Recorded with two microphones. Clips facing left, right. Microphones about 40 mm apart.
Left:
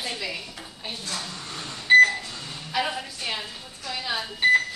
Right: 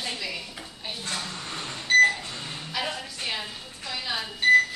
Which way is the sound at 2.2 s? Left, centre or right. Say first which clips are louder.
Right 1 dB; right.